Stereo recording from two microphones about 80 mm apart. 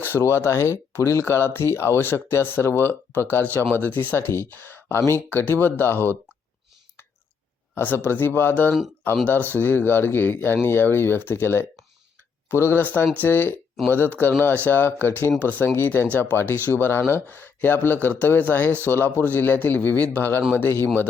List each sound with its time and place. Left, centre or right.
0.2 s speech: left
7.8 s speech: left